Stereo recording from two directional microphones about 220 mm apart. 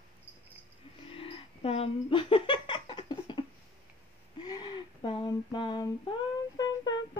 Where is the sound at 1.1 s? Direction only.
25° left (ahead or behind).